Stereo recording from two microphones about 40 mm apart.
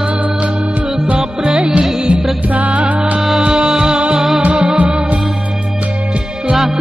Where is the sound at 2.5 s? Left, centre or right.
Right.